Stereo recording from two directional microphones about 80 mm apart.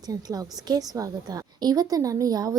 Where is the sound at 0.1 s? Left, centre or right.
Right.